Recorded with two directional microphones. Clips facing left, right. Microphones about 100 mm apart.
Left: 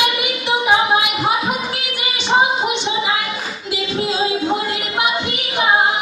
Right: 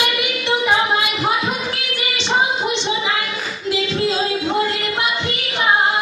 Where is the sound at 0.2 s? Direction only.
15° left (ahead or behind).